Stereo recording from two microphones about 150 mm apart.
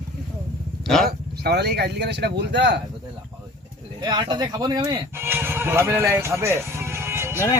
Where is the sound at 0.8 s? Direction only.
Centre (ahead or behind).